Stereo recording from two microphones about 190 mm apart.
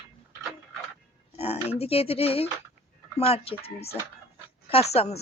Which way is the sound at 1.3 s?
30° left (ahead or behind).